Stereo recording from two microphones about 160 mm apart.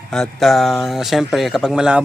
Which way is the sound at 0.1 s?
Centre (ahead or behind).